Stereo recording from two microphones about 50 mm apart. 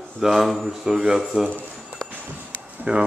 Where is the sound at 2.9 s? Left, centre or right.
Right.